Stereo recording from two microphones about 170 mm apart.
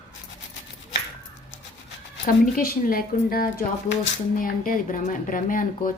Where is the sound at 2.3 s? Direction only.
60° left (ahead or behind).